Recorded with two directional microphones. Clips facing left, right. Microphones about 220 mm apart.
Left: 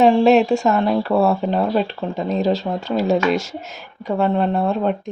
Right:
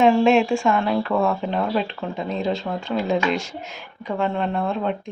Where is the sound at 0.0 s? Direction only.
35° left (ahead or behind).